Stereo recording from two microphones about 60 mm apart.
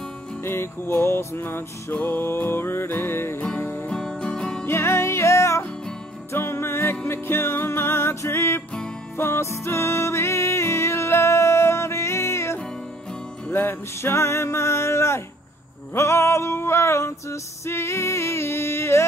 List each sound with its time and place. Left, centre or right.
0.4 s music: left
3.9 s music: centre
4.6 s music: left
6.3 s music: left
13.5 s music: left